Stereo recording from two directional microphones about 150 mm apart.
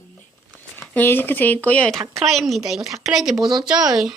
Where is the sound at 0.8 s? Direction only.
15° left (ahead or behind); by 3.8 s 5° right (ahead or behind).